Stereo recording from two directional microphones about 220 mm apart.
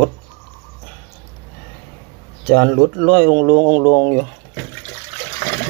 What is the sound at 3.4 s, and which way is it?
Speech, 15° left (ahead or behind).